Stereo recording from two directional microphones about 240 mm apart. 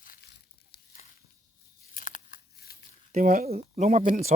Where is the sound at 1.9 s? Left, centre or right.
Left.